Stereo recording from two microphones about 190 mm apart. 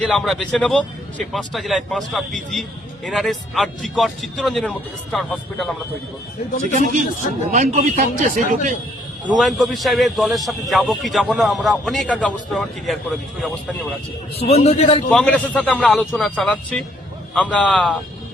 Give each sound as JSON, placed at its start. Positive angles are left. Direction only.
{"t": 0.0, "sound": "a man's voice", "side_deg": 5}
{"t": 6.6, "sound": "speech", "side_deg": -40}
{"t": 9.4, "sound": "a man's voice", "side_deg": 0}
{"t": 14.3, "sound": "a man's voice", "side_deg": 30}
{"t": 15.1, "sound": "a man's voice", "side_deg": 5}